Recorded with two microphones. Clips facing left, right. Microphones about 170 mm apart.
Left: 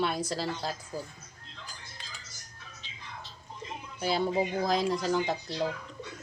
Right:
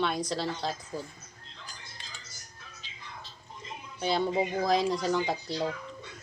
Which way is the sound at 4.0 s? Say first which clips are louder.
Even; 5° left (ahead or behind).